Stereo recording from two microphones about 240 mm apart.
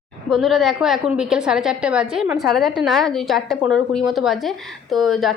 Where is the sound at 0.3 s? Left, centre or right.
Centre.